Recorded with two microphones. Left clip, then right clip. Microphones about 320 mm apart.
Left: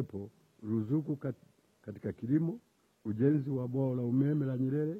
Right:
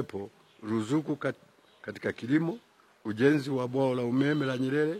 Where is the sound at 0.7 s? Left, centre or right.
Centre.